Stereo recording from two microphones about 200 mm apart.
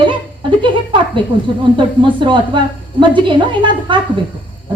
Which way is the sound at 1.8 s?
25° right (ahead or behind).